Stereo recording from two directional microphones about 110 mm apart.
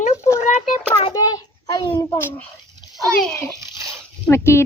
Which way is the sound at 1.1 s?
35° left (ahead or behind).